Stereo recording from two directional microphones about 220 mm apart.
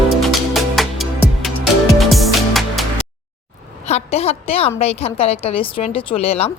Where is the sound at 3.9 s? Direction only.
30° left (ahead or behind).